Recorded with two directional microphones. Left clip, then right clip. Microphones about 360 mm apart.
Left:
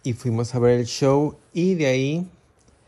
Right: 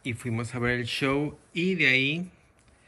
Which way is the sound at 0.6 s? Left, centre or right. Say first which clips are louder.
Left 9 dB; centre.